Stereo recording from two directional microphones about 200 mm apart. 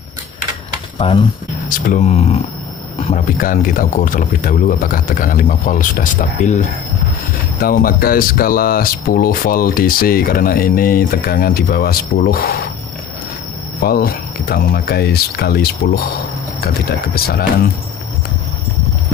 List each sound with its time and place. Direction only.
0.9 s speech: 25° left (ahead or behind)
1.7 s speech: 40° left (ahead or behind)
7.6 s speech: 45° left (ahead or behind)
13.7 s speech: 50° left (ahead or behind)